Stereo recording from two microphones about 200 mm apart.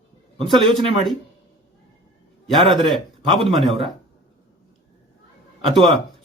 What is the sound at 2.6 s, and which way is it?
Speech, 20° right (ahead or behind).